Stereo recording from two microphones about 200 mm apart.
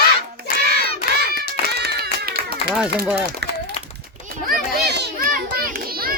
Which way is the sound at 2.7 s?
5° right (ahead or behind).